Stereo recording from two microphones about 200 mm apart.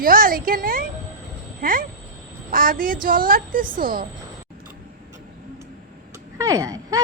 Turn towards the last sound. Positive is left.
turn(degrees=-15)  # may be behind; listen again after turning